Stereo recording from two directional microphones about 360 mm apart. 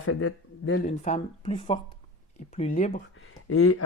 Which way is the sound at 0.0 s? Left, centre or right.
Left.